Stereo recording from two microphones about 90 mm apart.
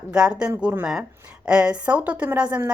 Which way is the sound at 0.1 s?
10° right (ahead or behind).